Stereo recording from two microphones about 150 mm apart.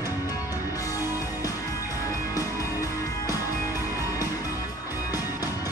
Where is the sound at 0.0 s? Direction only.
25° left (ahead or behind).